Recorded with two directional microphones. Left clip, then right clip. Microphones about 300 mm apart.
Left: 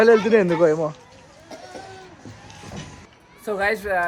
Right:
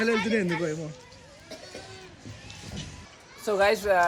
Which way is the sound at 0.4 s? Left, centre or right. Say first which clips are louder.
Left 12 dB; left.